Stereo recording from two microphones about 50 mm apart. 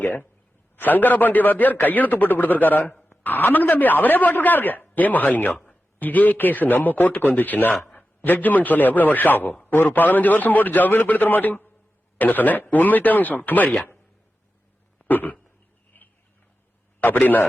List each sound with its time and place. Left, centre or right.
0.0 s a man's voice: left
15.0 s a sound: left
17.0 s a woman's voice: left